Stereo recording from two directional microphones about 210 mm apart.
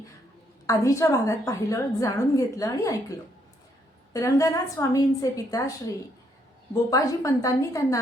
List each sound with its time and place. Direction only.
0.7 s a woman's voice: 15° left (ahead or behind)
4.1 s a woman's voice: 15° left (ahead or behind)
6.9 s a woman's voice: 15° left (ahead or behind)